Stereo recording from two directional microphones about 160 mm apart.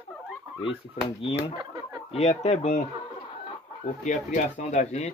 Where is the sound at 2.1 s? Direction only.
45° left (ahead or behind).